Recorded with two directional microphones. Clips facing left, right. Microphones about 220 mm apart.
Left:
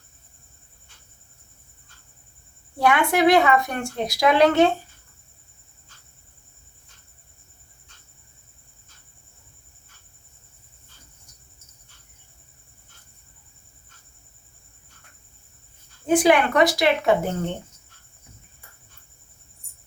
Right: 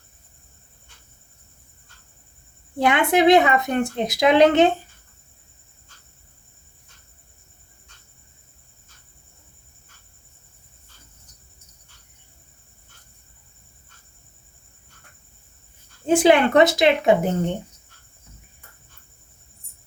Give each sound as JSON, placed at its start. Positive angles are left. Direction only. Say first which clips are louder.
{"t": 2.7, "sound": "a woman's voice", "louder": "right 2 dB", "side_deg": -20}
{"t": 16.0, "sound": "speech", "louder": "right 2 dB", "side_deg": -25}